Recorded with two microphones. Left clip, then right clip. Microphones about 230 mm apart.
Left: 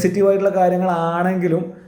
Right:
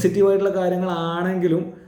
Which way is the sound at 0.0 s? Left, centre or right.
Right.